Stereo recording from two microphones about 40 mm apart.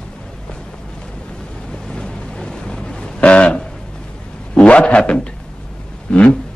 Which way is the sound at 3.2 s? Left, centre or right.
Left.